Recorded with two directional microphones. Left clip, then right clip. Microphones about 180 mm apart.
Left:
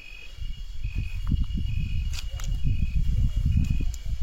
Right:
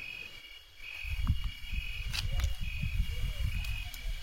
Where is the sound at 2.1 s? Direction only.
45° left (ahead or behind).